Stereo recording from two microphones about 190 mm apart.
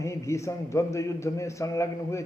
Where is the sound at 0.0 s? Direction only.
15° left (ahead or behind).